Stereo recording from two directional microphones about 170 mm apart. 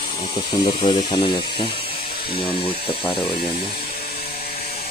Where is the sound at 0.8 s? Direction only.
30° left (ahead or behind).